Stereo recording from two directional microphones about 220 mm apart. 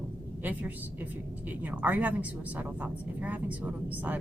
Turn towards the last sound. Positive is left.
turn(degrees=-5)  # may be behind; listen again after turning